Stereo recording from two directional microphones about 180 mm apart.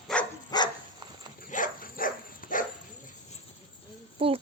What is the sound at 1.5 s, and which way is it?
Dog, 50° left (ahead or behind).